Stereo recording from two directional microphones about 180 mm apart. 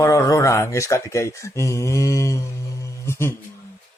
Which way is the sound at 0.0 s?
15° left (ahead or behind).